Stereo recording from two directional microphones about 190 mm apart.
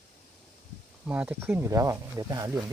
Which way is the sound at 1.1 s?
10° right (ahead or behind).